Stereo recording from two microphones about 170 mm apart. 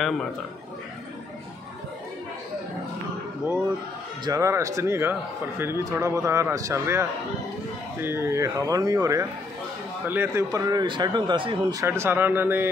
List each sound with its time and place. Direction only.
4.2 s a man's voice: 20° right (ahead or behind)
11.8 s a man's voice: 15° right (ahead or behind)